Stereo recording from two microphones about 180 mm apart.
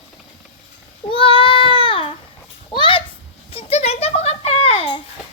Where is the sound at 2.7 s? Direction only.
30° left (ahead or behind).